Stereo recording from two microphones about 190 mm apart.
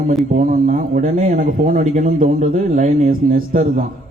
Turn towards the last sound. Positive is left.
turn(degrees=-45)  # may be behind; listen again after turning